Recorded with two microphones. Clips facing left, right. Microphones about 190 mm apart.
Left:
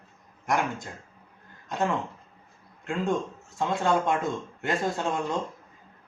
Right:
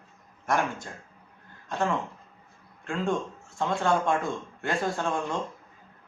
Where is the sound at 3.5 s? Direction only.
20° left (ahead or behind).